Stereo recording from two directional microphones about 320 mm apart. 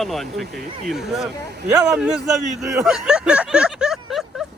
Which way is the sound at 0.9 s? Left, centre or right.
Centre.